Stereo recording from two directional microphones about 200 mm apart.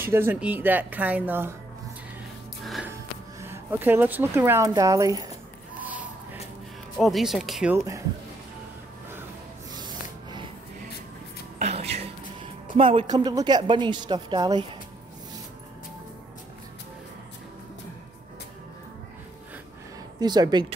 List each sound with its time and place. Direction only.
0.0 s speech: 10° right (ahead or behind)
2.6 s a sound: centre (ahead or behind)
2.9 s speech: 15° right (ahead or behind)
7.0 s speech: centre (ahead or behind)
7.7 s speech: 15° right (ahead or behind)
9.8 s a sound: 20° right (ahead or behind)
11.5 s a sound: 30° right (ahead or behind)
12.7 s speech: 30° right (ahead or behind)
20.2 s speech: 20° right (ahead or behind)